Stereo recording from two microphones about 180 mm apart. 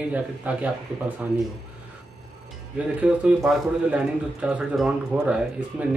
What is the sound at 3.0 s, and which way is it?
Speech, 5° right (ahead or behind).